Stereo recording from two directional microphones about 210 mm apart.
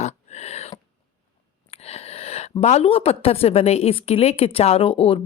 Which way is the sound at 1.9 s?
30° left (ahead or behind).